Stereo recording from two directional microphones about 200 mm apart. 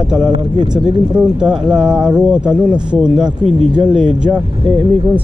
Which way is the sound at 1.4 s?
5° right (ahead or behind).